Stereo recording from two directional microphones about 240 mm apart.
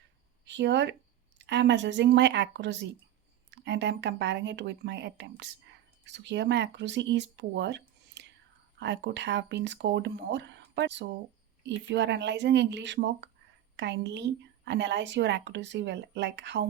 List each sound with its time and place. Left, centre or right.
0.4 s a woman's voice: right